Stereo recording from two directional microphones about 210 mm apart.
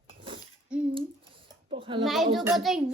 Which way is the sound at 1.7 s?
25° right (ahead or behind).